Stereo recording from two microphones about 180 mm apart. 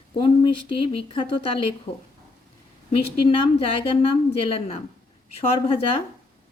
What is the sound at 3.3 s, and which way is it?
A woman's voice, 30° left (ahead or behind).